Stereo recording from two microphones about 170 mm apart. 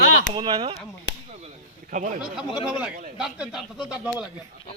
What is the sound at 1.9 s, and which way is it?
Speech, 50° right (ahead or behind).